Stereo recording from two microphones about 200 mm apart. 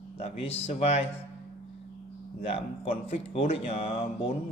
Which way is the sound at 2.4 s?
30° left (ahead or behind).